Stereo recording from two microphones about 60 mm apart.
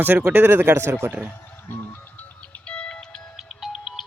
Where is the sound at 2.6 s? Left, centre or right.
Centre.